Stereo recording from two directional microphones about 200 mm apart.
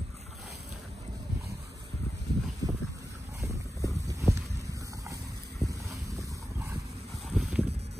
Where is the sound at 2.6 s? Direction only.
20° right (ahead or behind).